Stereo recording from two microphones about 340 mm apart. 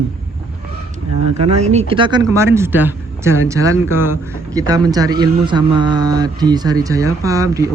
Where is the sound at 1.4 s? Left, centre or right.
Centre.